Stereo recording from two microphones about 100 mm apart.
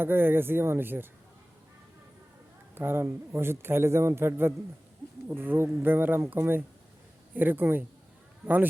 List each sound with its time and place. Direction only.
0.0 s a man's voice: 20° right (ahead or behind)
2.7 s a man's voice: 25° right (ahead or behind)